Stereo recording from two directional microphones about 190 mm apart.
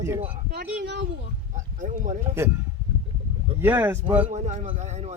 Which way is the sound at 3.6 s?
10° right (ahead or behind).